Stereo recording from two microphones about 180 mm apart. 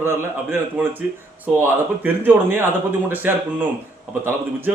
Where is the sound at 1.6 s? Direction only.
10° right (ahead or behind).